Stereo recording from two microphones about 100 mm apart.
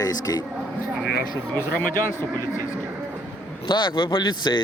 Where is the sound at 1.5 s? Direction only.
25° left (ahead or behind).